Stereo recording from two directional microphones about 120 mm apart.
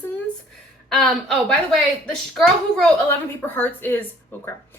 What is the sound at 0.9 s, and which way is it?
Speech, centre (ahead or behind).